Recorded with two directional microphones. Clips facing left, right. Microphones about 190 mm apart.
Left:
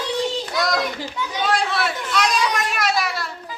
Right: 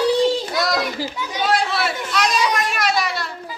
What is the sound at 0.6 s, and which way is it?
Children playing, 5° right (ahead or behind).